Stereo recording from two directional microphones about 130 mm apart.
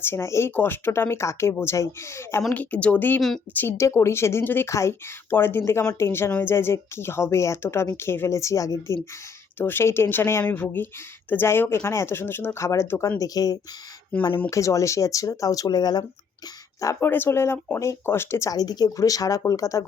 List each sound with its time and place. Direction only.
0.0 s speech: 20° left (ahead or behind)
3.2 s a woman's voice: 5° left (ahead or behind)
3.5 s speech: 15° left (ahead or behind)
14.1 s speech: 10° left (ahead or behind)
14.5 s speech: 25° left (ahead or behind)
16.8 s speech: 20° left (ahead or behind)